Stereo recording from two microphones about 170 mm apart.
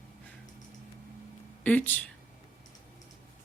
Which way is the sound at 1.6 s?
10° left (ahead or behind).